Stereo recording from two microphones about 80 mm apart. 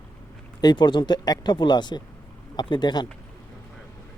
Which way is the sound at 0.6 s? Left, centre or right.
Left.